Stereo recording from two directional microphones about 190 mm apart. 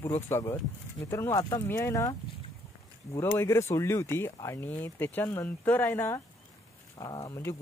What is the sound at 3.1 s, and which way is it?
Speech, 15° left (ahead or behind).